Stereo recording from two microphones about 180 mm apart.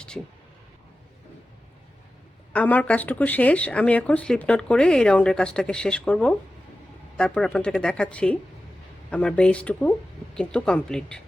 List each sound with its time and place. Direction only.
2.5 s speech: 10° left (ahead or behind)